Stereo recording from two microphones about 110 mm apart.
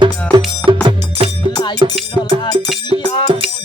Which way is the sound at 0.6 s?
15° left (ahead or behind).